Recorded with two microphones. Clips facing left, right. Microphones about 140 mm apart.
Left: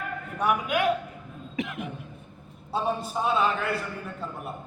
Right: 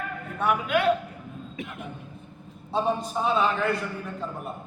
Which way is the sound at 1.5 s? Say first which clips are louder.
Left 8 dB; 90° left.